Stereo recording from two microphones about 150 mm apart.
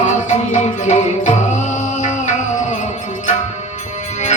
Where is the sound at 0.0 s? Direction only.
50° left (ahead or behind).